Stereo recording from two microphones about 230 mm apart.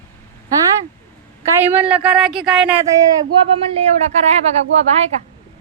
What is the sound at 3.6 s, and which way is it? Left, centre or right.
Speech, right.